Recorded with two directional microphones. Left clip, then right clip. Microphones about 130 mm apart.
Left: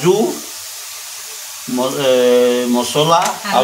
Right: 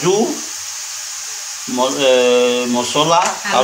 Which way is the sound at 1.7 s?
20° left (ahead or behind).